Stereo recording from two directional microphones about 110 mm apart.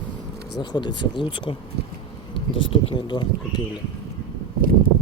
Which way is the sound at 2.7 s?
45° left (ahead or behind).